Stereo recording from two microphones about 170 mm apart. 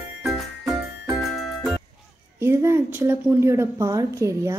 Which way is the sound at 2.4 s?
15° right (ahead or behind).